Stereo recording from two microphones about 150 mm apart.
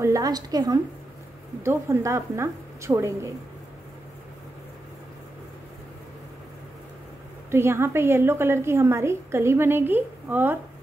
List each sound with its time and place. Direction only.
0.0 s a woman's voice: 25° right (ahead or behind)
7.5 s a woman's voice: 15° right (ahead or behind)